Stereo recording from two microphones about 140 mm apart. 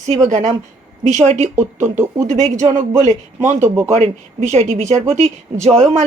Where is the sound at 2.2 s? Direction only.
55° right (ahead or behind).